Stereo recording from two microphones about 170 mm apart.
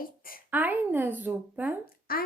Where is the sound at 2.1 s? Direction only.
60° left (ahead or behind).